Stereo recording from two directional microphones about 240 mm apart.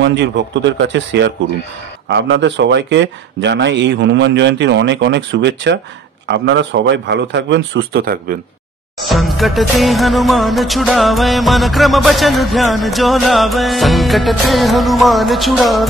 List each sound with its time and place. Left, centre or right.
0.0 s speech: right
9.1 s music: centre